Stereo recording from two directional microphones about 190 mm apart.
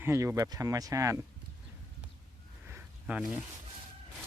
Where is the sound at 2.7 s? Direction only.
10° right (ahead or behind).